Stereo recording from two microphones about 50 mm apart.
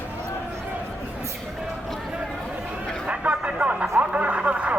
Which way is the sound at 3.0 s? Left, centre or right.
Right.